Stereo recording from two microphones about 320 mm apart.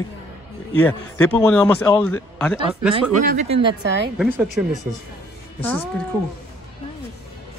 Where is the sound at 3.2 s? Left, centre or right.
Right.